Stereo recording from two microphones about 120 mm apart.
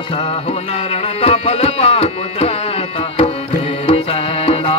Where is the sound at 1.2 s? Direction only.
55° left (ahead or behind).